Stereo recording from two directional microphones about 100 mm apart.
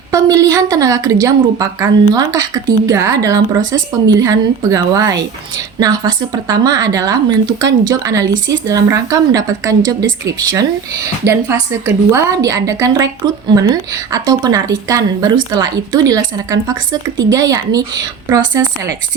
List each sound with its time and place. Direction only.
0.1 s speech: 35° right (ahead or behind)